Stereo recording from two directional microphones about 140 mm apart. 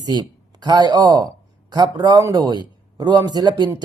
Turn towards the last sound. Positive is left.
turn(degrees=-30)  # may be behind; listen again after turning